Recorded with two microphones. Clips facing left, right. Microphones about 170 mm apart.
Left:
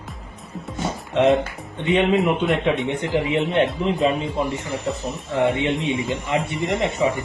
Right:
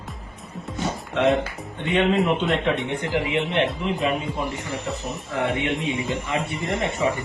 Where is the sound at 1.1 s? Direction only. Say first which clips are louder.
Left 4 dB; 30° left (ahead or behind).